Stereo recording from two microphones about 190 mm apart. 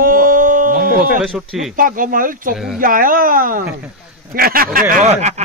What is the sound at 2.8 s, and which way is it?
Speech, 45° right (ahead or behind).